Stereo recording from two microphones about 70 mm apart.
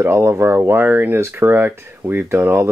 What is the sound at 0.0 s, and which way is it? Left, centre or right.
Speech, right.